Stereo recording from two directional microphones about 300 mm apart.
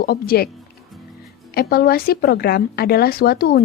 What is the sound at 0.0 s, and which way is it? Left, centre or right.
Speech, left.